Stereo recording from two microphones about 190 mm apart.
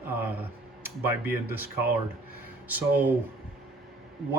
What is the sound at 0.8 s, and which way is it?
Speech, 10° right (ahead or behind).